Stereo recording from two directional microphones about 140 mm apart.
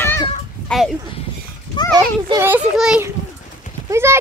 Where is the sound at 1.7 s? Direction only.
35° left (ahead or behind).